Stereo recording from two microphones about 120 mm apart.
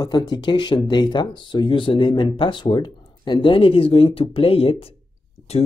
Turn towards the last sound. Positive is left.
turn(degrees=60)  # may be behind; listen again after turning